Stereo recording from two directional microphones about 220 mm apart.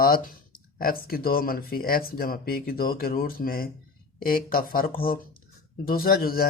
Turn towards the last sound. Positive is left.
turn(degrees=45)  # may be behind; listen again after turning